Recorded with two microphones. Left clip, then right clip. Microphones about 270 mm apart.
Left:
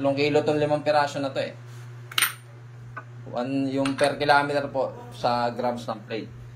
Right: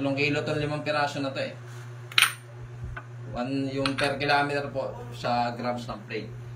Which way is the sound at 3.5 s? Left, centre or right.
Centre.